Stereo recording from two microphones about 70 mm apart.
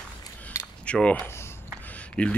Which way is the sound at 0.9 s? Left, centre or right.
Centre.